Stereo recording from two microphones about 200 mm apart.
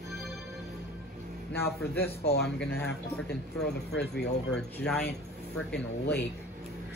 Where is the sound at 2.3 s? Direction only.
55° left (ahead or behind).